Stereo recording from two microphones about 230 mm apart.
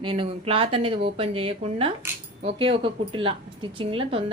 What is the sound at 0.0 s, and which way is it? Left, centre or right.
A woman's voice, right.